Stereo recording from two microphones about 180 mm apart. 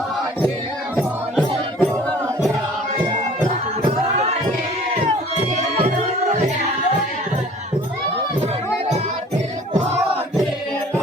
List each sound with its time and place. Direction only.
0.9 s music: 5° left (ahead or behind)
5.5 s music: 40° right (ahead or behind)